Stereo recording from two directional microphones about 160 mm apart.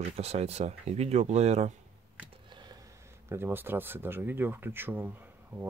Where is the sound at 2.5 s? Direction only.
25° right (ahead or behind).